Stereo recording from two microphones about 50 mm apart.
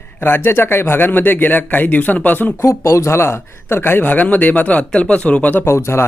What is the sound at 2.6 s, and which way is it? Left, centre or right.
Speech, left.